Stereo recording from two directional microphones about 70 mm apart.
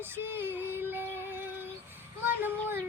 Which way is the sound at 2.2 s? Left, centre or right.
Right.